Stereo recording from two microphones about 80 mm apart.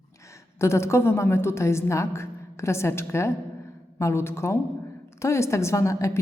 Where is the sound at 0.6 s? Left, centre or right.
Left.